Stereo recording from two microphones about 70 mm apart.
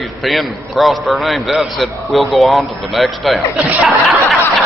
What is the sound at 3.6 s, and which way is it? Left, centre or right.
Speech, centre.